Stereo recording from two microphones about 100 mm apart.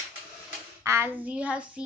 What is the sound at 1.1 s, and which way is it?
Speech, 15° right (ahead or behind).